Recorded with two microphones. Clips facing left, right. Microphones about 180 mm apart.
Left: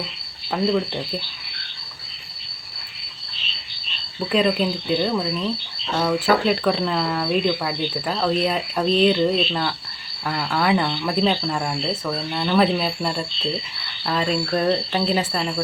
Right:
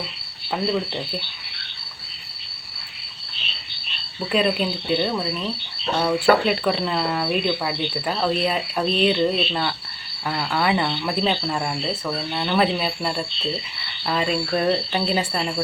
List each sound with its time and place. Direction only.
0.5 s speech: centre (ahead or behind)
4.3 s speech: 5° right (ahead or behind)
6.4 s speech: 5° right (ahead or behind)